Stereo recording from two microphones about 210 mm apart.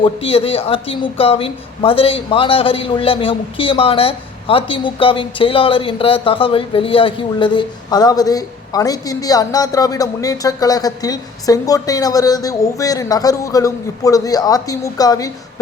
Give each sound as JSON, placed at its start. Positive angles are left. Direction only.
{"t": 0.0, "sound": "a man's voice", "side_deg": 25}